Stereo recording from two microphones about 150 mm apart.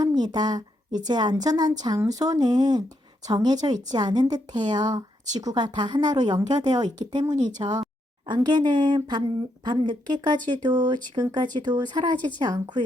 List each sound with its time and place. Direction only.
0.0 s a woman's voice: 25° right (ahead or behind)